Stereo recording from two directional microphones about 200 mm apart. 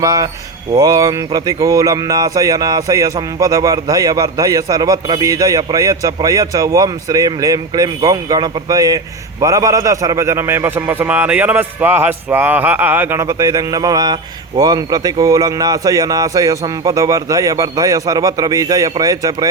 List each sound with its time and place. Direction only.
0.0 s a man's voice: 15° right (ahead or behind)